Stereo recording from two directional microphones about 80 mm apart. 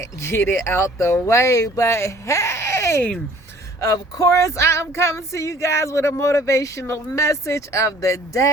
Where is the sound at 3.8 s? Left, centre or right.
Left.